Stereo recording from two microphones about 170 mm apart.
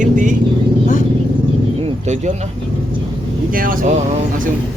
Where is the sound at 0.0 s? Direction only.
50° right (ahead or behind).